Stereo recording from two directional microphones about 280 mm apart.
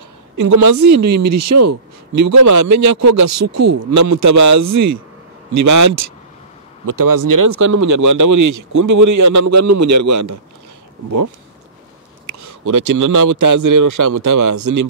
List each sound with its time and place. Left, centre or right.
0.4 s a man's voice: right
5.5 s speech: right
12.4 s speech: right